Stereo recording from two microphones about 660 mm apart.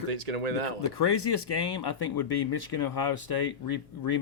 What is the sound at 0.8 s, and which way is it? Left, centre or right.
Speech, left.